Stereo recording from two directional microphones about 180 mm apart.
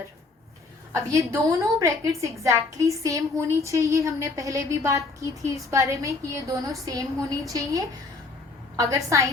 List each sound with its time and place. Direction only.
1.1 s a woman's voice: 15° right (ahead or behind)